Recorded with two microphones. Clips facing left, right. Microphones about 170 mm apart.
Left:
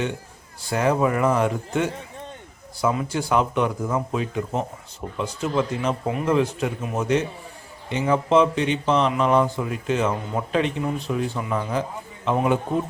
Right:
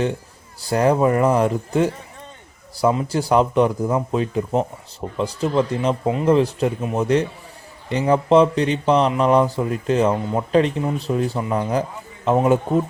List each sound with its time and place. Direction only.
0.6 s speech: 35° right (ahead or behind)